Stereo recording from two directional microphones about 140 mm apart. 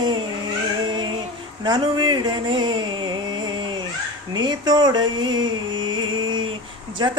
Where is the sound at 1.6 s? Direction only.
30° right (ahead or behind).